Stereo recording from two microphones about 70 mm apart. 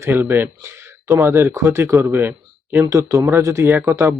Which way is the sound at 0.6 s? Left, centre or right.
Right.